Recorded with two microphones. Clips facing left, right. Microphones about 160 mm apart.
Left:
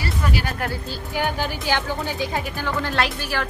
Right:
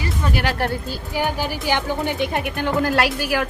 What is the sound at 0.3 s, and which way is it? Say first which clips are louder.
Music: right 6 dB; 70° right (ahead or behind).